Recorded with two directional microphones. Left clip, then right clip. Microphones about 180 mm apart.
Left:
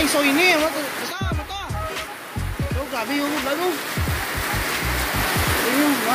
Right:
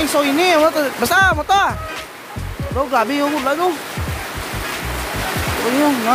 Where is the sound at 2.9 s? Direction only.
40° right (ahead or behind).